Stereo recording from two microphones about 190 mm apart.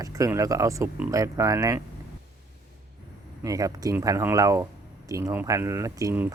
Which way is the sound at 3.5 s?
20° right (ahead or behind).